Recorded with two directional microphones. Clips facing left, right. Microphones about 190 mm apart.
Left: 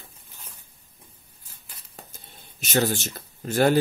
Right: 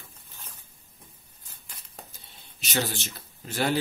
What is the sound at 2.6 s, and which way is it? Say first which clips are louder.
Speech: left 6 dB; 50° left (ahead or behind).